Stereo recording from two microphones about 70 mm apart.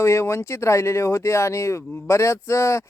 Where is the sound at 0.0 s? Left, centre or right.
Left.